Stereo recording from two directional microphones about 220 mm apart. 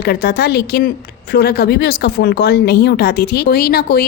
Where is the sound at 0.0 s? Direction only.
45° left (ahead or behind).